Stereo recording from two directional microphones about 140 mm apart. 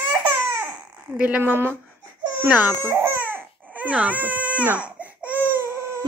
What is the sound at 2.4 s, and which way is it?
Baby cry, 15° right (ahead or behind).